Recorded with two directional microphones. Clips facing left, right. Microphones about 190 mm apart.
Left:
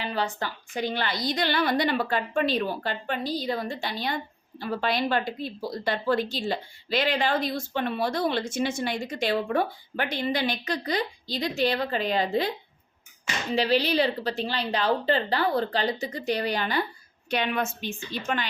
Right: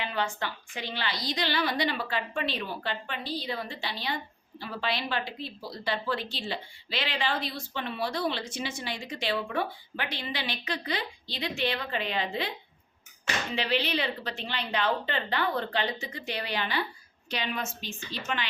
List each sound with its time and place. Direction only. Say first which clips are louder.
0.0 s a woman's voice: left 2 dB; 35° left (ahead or behind)
13.6 s a woman's voice: left 7 dB; 35° left (ahead or behind)
17.2 s a woman's voice: left 6 dB; 55° left (ahead or behind)